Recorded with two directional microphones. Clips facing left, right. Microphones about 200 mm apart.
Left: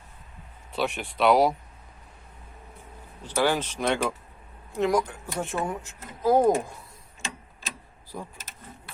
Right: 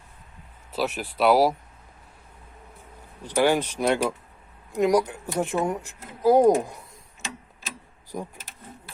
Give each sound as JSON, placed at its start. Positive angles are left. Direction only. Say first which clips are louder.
{"t": 0.7, "sound": "speech", "louder": "right 1 dB", "side_deg": -5}
{"t": 3.2, "sound": "speech", "louder": "right 3 dB", "side_deg": -15}
{"t": 8.1, "sound": "speech", "louder": "right 4 dB", "side_deg": -15}